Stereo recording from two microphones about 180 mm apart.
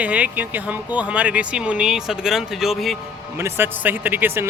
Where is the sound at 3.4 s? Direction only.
10° right (ahead or behind).